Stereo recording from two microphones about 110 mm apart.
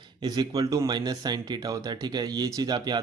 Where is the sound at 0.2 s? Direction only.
40° right (ahead or behind).